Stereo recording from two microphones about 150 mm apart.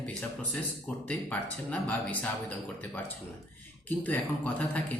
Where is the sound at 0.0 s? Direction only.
5° left (ahead or behind).